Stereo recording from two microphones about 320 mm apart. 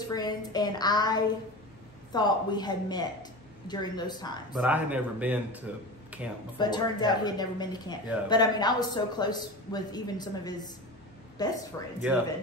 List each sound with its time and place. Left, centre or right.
0.0 s speech: centre
4.6 s speech: centre
6.6 s speech: centre
12.1 s speech: centre